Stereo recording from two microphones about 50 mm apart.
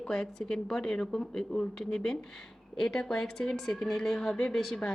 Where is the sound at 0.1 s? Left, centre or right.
Centre.